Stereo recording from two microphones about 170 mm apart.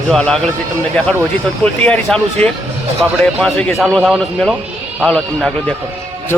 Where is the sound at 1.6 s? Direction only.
5° left (ahead or behind).